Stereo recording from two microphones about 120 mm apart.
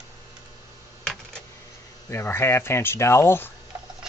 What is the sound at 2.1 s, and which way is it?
Speech, 20° left (ahead or behind).